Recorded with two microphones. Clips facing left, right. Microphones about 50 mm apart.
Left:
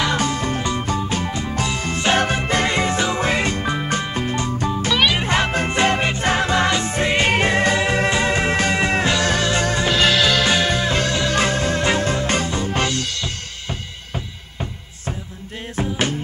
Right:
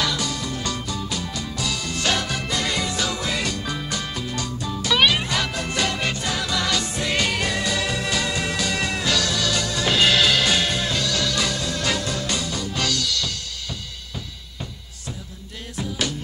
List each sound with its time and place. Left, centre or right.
0.1 s music: left
9.8 s music: centre
10.4 s music: left
15.7 s music: left